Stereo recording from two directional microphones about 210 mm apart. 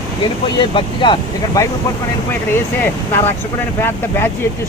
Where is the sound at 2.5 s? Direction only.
10° left (ahead or behind).